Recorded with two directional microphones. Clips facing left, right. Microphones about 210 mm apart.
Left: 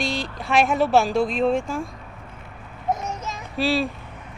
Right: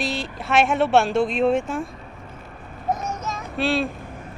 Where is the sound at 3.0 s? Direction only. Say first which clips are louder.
Right 1 dB; 30° left (ahead or behind).